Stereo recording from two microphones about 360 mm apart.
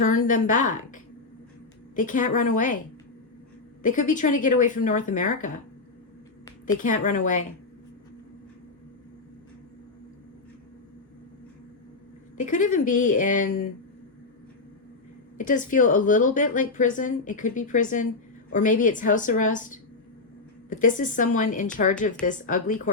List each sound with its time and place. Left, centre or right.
0.0 s a woman's voice: left
3.8 s a woman's voice: left
6.8 s a woman's voice: left
12.4 s a woman's voice: left
15.4 s a woman's voice: left